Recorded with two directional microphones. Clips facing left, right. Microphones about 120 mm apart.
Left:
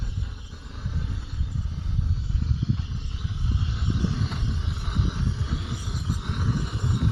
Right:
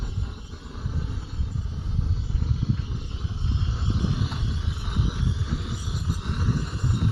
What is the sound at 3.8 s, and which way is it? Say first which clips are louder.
Vehicle: left 1 dB; 25° right (ahead or behind).